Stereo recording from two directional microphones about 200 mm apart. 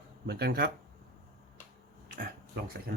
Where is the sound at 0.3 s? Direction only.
55° right (ahead or behind).